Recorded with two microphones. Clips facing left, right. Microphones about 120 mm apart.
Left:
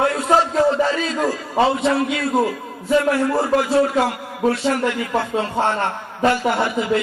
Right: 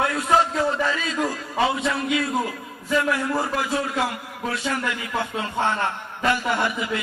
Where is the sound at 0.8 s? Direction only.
35° left (ahead or behind).